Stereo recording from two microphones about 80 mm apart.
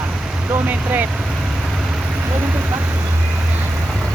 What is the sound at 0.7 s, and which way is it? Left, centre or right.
Speech, right.